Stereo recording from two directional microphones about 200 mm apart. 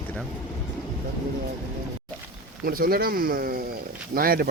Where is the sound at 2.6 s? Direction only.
45° right (ahead or behind).